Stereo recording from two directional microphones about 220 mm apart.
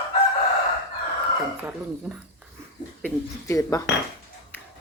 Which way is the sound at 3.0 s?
15° left (ahead or behind).